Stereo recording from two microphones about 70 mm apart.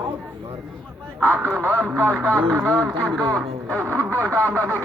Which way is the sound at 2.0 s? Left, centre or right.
Right.